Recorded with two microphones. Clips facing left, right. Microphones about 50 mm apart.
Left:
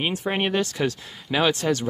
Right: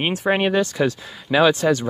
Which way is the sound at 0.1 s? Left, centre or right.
Right.